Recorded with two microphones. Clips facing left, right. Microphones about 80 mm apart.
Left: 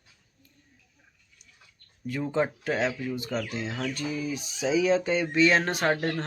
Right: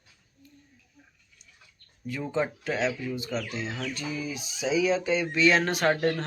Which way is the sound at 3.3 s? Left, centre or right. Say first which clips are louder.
Left 2 dB; left.